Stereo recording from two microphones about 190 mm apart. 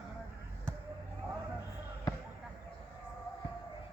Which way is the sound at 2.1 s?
20° left (ahead or behind).